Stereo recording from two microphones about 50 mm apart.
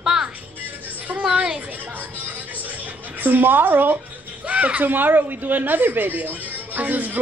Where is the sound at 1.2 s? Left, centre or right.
Centre.